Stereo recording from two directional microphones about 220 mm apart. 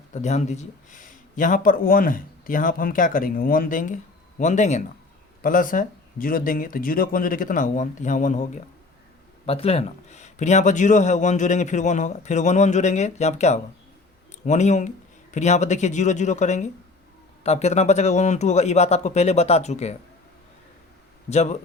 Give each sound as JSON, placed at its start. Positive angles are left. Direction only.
{"t": 0.1, "sound": "speech", "side_deg": 30}
{"t": 21.2, "sound": "speech", "side_deg": 30}